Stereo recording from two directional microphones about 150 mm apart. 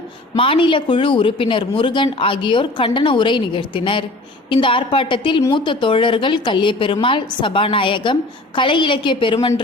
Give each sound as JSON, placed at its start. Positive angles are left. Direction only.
{"t": 0.3, "sound": "a woman's voice", "side_deg": 35}